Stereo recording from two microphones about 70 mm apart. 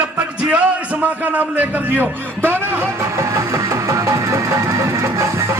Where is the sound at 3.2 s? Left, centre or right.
Right.